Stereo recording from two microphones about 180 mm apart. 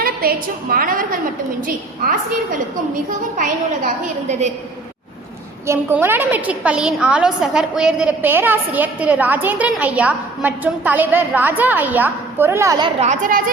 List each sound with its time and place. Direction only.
0.0 s a woman's voice: 55° right (ahead or behind)
3.3 s a woman's voice: 45° right (ahead or behind)
5.6 s a woman's voice: 15° right (ahead or behind)
13.0 s a woman's voice: 45° right (ahead or behind)